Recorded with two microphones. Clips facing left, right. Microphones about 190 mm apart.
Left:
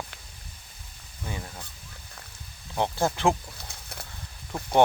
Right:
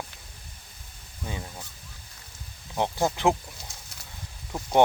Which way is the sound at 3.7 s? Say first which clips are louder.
Left 5 dB; 60° left (ahead or behind).